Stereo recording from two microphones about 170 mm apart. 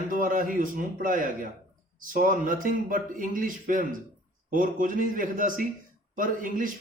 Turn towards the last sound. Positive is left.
turn(degrees=-50)  # may be behind; listen again after turning